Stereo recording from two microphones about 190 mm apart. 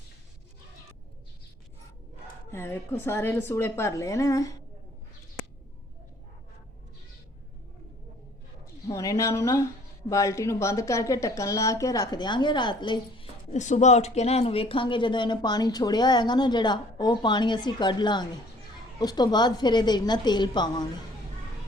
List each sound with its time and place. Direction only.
2.5 s a woman's voice: 10° left (ahead or behind)
8.9 s a woman's voice: 15° left (ahead or behind)
13.5 s speech: 40° left (ahead or behind); by 20.8 s 25° left (ahead or behind)